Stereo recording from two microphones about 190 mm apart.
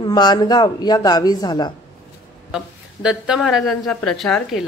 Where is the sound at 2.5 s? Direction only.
5° right (ahead or behind).